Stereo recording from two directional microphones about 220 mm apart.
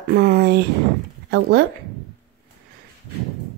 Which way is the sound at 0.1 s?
45° right (ahead or behind).